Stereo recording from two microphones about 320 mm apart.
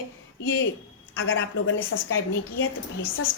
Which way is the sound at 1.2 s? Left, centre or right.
Left.